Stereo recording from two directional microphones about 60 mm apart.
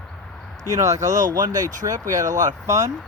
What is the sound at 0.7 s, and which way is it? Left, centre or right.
Speech, right.